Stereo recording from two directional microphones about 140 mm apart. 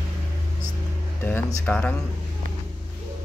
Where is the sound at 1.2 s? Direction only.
15° left (ahead or behind).